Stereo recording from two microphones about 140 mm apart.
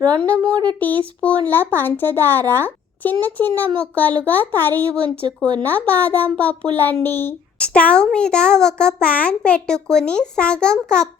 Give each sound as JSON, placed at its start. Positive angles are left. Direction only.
{"t": 0.4, "sound": "speech", "side_deg": -30}
{"t": 0.8, "sound": "a child's voice", "side_deg": 10}